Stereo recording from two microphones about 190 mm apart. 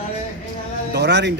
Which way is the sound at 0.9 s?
65° right (ahead or behind).